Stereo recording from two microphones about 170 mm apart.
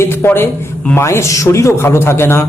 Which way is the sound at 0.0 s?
15° left (ahead or behind).